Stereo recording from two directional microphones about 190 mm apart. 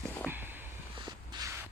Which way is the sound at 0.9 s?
25° right (ahead or behind).